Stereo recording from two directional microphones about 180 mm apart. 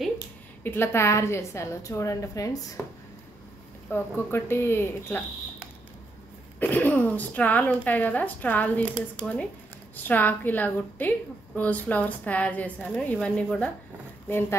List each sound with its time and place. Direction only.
0.7 s a woman's voice: 15° left (ahead or behind)
3.9 s a woman's voice: 15° left (ahead or behind)
6.6 s a woman's voice: 10° left (ahead or behind)